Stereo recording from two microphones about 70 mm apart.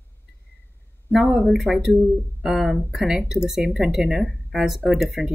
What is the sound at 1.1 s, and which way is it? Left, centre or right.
Speech, centre.